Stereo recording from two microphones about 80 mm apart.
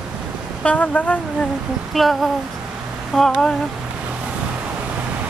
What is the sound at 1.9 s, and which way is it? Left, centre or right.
Speech, centre.